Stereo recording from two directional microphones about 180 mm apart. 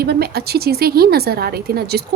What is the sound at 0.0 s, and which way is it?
Speech, 60° right (ahead or behind).